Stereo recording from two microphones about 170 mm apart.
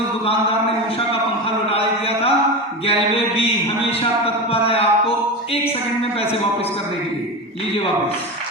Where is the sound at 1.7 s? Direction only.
35° left (ahead or behind).